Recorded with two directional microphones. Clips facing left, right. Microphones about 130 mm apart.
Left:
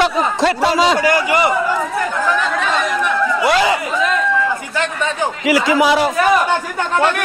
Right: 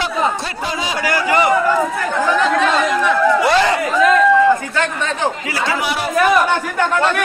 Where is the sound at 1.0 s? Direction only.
15° left (ahead or behind).